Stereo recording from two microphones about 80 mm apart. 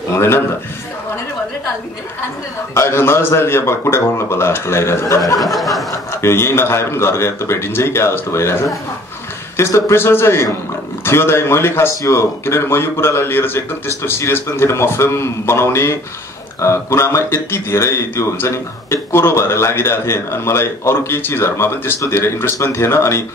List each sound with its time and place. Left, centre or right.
0.1 s a man's voice: left
2.7 s a man's voice: left
5.4 s a sound: centre
5.9 s a man's voice: left